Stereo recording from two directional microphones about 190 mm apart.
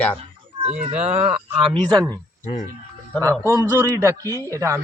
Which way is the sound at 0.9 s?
35° right (ahead or behind).